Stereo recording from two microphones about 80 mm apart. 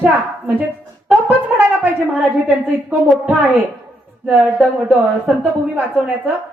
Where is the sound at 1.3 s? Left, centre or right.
Right.